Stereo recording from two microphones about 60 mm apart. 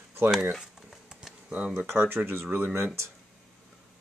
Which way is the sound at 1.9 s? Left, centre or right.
Right.